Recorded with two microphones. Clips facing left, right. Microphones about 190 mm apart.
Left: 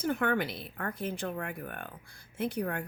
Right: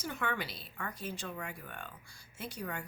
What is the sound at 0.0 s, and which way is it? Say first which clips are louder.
Speech: left 8 dB; 55° left (ahead or behind).